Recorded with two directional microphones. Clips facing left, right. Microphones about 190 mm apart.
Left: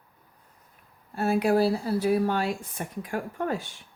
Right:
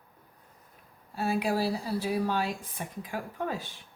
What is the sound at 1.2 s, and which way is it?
A woman's voice, 55° left (ahead or behind).